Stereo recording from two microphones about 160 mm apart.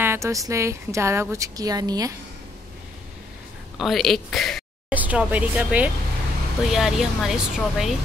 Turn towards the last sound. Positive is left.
turn(degrees=0)  # may be behind; listen again after turning